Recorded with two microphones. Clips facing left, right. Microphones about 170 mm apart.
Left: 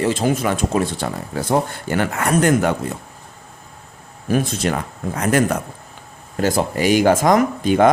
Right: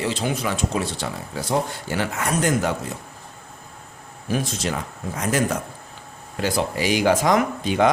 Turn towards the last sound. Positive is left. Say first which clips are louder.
# left 5 dB
turn(degrees=50)  # may be behind; listen again after turning